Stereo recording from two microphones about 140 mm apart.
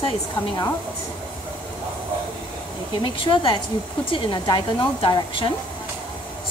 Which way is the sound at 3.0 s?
35° left (ahead or behind).